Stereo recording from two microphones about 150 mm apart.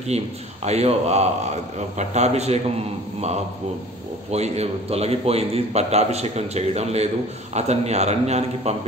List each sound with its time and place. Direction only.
0.1 s a man's voice: 45° right (ahead or behind)
4.3 s a man's voice: 45° right (ahead or behind)